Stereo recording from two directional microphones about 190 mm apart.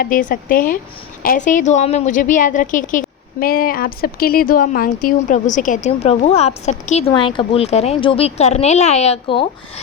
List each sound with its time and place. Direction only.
0.0 s a woman's voice: 45° left (ahead or behind)